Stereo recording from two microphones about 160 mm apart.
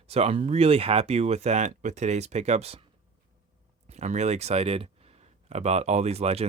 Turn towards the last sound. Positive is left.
turn(degrees=-40)  # may be behind; listen again after turning